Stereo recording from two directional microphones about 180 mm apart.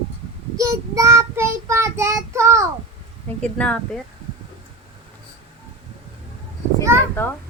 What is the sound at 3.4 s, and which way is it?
Speech, 5° left (ahead or behind).